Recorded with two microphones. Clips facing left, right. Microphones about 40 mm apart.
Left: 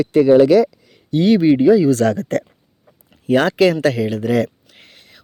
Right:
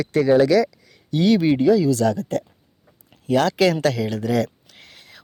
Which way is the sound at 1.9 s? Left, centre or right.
Left.